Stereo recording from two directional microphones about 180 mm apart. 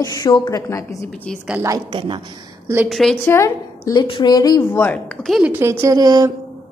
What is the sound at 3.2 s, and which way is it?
A woman's voice, 15° left (ahead or behind).